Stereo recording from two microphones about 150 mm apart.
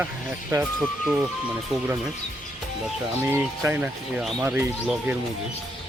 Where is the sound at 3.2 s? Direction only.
15° right (ahead or behind).